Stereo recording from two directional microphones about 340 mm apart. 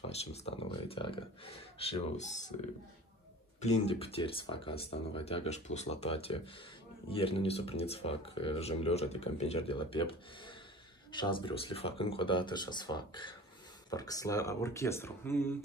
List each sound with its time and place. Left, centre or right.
0.0 s speech: centre
3.6 s speech: centre